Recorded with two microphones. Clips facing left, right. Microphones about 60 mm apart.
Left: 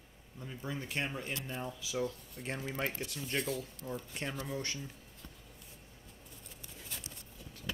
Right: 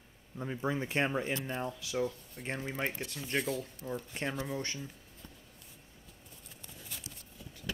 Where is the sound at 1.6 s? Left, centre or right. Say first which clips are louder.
Even; centre.